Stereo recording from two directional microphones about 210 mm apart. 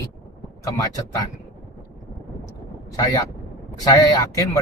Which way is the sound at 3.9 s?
15° left (ahead or behind).